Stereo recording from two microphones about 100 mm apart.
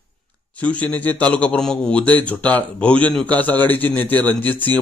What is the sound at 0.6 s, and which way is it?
A man's voice, 15° left (ahead or behind).